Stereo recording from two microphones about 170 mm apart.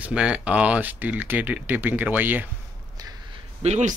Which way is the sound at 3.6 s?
45° right (ahead or behind).